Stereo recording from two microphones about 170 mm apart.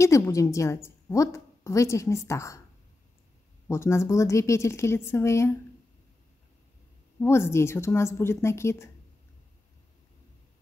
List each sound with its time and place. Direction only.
0.0 s a woman's voice: 20° left (ahead or behind)
3.6 s a woman's voice: 15° left (ahead or behind)
7.2 s a woman's voice: 15° left (ahead or behind)